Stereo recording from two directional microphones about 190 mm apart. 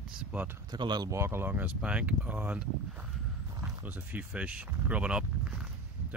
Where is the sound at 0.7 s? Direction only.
20° right (ahead or behind).